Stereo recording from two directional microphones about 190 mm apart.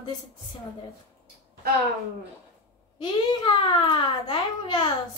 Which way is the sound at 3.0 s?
25° left (ahead or behind).